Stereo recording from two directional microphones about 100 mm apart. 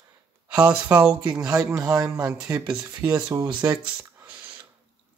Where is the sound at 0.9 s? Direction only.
10° right (ahead or behind).